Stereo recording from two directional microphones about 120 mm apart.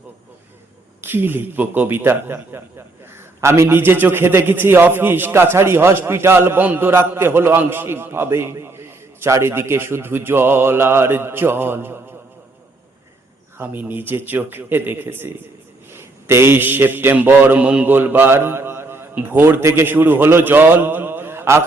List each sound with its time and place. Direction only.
1.0 s a man's voice: 20° right (ahead or behind)
13.6 s a man's voice: 15° right (ahead or behind)